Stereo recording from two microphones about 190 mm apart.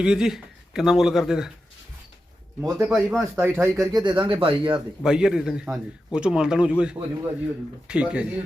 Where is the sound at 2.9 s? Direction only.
Centre (ahead or behind).